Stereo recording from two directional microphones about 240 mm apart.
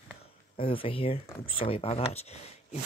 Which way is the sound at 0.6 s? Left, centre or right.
Left.